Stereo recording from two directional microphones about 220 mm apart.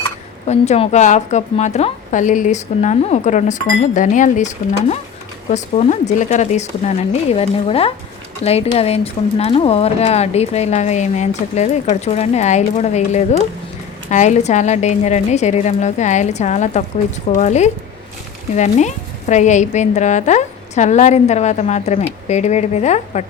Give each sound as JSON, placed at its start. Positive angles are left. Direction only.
{"t": 0.4, "sound": "a woman's voice", "side_deg": 30}